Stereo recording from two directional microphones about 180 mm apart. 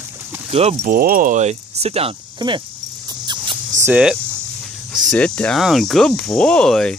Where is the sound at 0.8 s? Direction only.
50° right (ahead or behind); by 2.6 s 25° right (ahead or behind).